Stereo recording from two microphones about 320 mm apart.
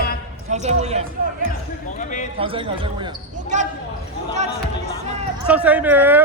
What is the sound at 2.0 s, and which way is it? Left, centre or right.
Speech, left.